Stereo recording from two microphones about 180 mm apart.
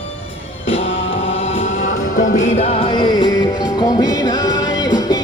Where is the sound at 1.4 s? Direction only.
40° left (ahead or behind).